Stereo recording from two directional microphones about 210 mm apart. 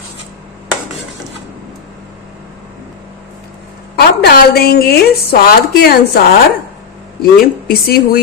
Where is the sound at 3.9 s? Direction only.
50° left (ahead or behind).